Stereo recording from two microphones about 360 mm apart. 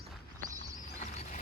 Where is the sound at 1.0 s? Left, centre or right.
Centre.